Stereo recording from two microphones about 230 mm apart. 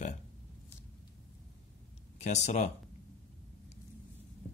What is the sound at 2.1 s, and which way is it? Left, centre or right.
Speech, left.